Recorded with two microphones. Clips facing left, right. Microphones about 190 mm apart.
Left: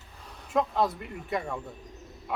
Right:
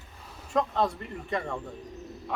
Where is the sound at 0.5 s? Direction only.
5° left (ahead or behind).